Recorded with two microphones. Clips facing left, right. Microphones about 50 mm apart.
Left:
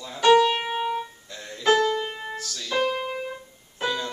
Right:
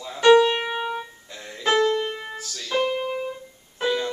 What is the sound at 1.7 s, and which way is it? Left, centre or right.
Music, right.